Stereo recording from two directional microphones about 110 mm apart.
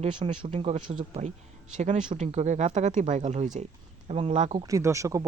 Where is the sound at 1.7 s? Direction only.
90° right.